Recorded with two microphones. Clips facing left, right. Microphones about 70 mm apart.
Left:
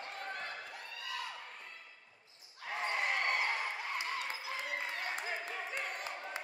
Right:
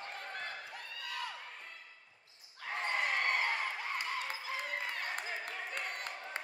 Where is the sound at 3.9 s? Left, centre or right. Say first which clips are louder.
Even; right.